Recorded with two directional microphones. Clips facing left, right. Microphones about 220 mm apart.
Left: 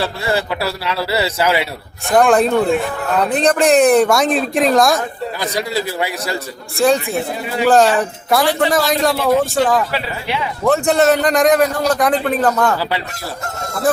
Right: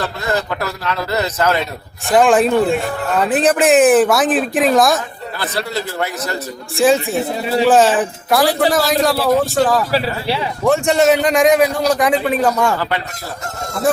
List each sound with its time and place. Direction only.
0.0 s a man's voice: 10° left (ahead or behind)
2.0 s speech: centre (ahead or behind)
5.4 s a man's voice: 15° left (ahead or behind)
6.7 s speech: centre (ahead or behind)
9.9 s speech: 35° right (ahead or behind)
10.7 s a man's voice: centre (ahead or behind)